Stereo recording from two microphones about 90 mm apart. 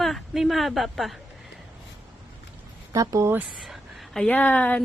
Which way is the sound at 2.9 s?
40° right (ahead or behind).